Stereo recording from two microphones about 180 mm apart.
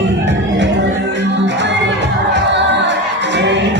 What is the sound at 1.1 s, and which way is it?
Music, 80° right.